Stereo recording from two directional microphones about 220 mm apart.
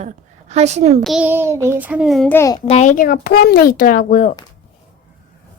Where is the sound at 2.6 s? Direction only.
30° left (ahead or behind).